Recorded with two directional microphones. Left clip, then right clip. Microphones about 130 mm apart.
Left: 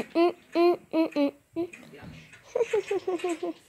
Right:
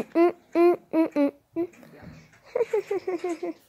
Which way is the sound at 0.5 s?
20° right (ahead or behind).